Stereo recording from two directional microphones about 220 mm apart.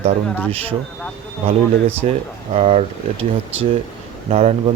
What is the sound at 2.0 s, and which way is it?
Speech, 30° right (ahead or behind).